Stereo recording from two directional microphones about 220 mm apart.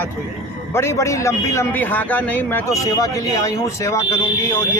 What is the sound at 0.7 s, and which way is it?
Speech, 10° left (ahead or behind).